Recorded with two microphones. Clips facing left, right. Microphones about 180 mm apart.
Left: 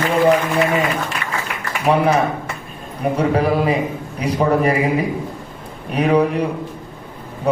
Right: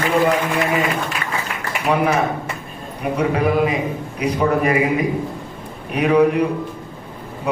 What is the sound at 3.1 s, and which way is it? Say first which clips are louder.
A man's voice: even; 30° left (ahead or behind).